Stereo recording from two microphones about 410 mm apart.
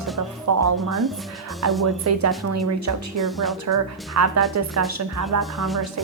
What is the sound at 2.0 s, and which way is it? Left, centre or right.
Speech, right.